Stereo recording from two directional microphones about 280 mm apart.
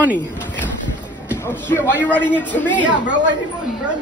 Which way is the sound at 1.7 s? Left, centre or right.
Centre.